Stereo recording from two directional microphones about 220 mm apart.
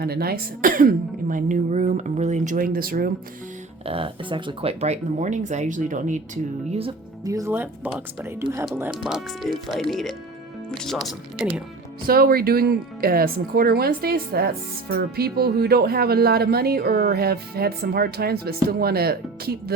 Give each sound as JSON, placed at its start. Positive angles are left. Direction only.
{"t": 0.0, "sound": "speech", "side_deg": -45}
{"t": 3.8, "sound": "speech", "side_deg": -25}
{"t": 7.3, "sound": "speech", "side_deg": -15}
{"t": 12.0, "sound": "speech", "side_deg": -45}